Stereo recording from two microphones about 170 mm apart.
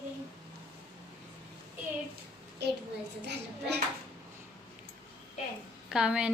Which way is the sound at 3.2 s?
80° right.